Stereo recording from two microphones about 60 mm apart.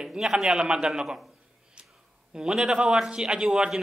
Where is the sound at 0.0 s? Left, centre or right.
Centre.